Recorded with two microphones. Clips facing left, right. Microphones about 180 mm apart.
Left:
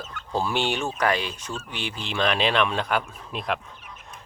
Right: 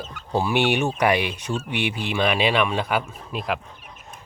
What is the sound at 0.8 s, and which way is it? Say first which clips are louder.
Speech: right 4 dB; 10° right (ahead or behind).